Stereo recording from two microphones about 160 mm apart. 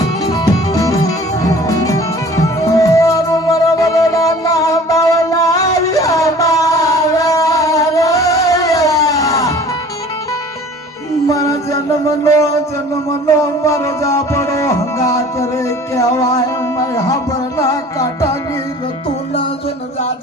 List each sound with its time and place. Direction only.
0.0 s music: 20° left (ahead or behind)
11.3 s music: 20° left (ahead or behind)